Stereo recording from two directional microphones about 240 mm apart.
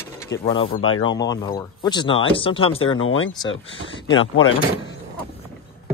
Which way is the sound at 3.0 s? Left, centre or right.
Left.